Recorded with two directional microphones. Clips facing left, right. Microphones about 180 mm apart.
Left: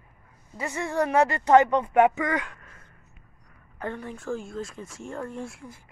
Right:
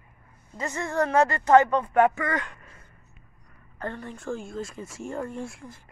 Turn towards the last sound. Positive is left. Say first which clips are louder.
# right 1 dB
turn(degrees=5)  # may be behind; listen again after turning